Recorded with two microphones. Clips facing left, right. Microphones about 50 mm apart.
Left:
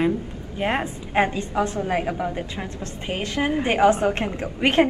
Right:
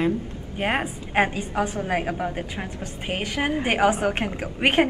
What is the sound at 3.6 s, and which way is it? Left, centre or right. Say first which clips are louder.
A woman's voice: left 3 dB; centre.